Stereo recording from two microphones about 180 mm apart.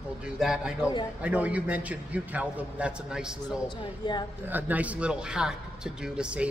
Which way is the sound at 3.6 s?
25° left (ahead or behind).